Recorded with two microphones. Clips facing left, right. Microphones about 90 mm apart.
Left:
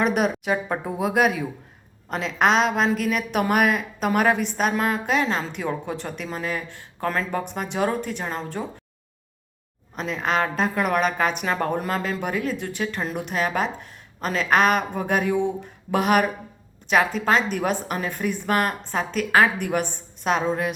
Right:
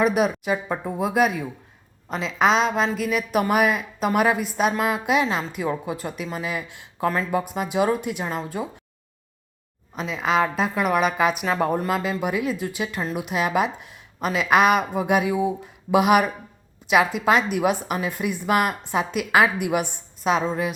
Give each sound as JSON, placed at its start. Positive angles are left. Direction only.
{"t": 0.0, "sound": "a woman's voice", "side_deg": 0}
{"t": 9.9, "sound": "a woman's voice", "side_deg": 0}